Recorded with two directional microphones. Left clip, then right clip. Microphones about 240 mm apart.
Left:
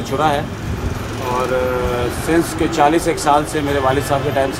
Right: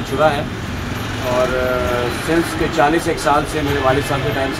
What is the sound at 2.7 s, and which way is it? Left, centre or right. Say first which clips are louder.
Speech: left 1 dB; left.